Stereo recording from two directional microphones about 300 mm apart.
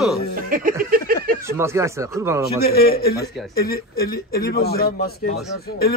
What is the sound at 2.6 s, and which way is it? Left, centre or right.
A man's voice, left.